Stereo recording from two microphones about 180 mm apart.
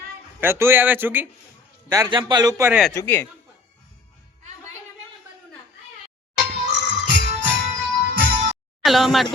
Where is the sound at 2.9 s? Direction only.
15° left (ahead or behind).